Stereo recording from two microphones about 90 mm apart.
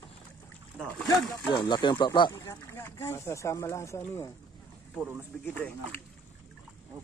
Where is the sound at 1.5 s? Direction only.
60° left (ahead or behind).